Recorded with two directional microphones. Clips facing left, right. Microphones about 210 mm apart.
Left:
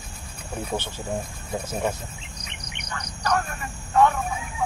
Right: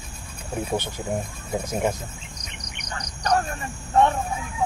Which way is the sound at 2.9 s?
35° right (ahead or behind).